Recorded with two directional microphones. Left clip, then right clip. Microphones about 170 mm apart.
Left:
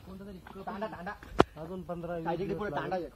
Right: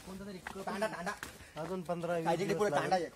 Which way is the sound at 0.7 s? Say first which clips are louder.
Right 1 dB; 60° right (ahead or behind).